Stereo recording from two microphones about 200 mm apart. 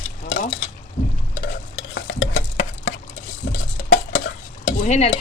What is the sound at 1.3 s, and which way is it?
Stir, 65° left (ahead or behind).